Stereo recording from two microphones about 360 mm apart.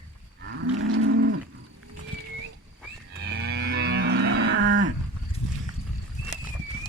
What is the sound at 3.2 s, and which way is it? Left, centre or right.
Livestock, right.